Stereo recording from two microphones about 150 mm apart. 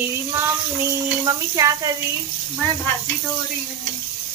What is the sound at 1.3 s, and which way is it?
Speech, 25° right (ahead or behind).